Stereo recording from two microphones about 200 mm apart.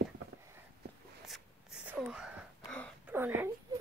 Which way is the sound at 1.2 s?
Centre (ahead or behind).